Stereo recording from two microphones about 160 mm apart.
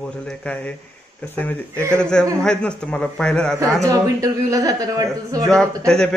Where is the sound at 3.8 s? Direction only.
20° right (ahead or behind).